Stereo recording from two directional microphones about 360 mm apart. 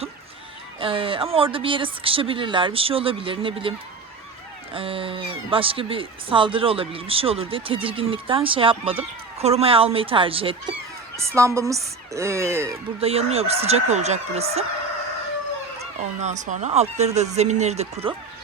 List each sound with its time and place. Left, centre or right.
0.8 s speech: centre
16.2 s speech: centre